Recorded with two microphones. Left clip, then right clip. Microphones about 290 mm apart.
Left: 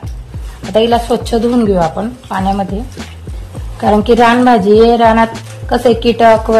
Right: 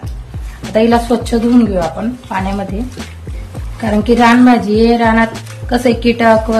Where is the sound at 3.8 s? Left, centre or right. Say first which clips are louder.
Left 3 dB; left.